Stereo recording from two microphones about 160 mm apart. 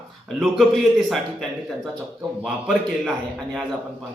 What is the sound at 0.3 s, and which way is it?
A man's voice, 5° right (ahead or behind).